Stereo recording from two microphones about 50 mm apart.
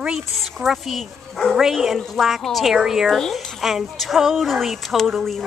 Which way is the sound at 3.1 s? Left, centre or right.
Centre.